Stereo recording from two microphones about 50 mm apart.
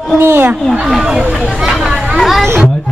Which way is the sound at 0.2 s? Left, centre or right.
Right.